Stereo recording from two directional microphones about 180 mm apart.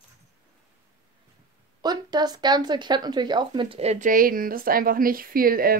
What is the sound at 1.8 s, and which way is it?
Speech, 25° right (ahead or behind).